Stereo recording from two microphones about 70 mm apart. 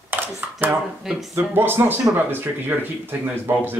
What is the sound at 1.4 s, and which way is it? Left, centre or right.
Speech, right.